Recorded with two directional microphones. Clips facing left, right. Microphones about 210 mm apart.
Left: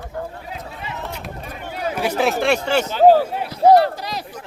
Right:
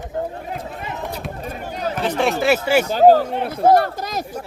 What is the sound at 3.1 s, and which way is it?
Speech, 5° left (ahead or behind).